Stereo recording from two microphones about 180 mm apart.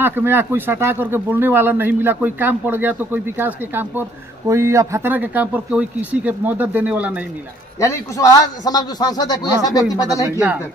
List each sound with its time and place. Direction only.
0.0 s speech: 10° right (ahead or behind)
7.8 s a man's voice: 15° left (ahead or behind)